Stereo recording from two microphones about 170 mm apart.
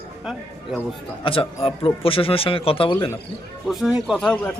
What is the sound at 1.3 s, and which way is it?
Speech, 35° left (ahead or behind).